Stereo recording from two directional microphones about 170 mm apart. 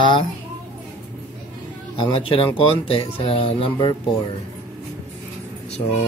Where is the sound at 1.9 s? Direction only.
30° left (ahead or behind).